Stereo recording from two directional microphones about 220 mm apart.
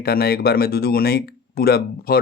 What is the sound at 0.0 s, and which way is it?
Speech, 45° left (ahead or behind).